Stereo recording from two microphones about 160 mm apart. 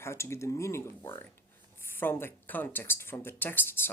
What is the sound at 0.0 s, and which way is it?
Speech, 15° left (ahead or behind).